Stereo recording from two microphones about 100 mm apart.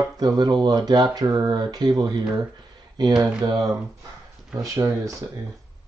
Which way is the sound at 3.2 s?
40° right (ahead or behind).